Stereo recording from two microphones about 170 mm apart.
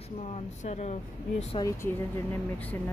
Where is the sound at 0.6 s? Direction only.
40° left (ahead or behind).